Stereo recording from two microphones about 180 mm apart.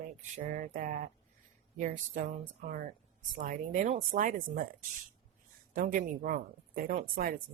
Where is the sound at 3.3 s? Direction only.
45° right (ahead or behind).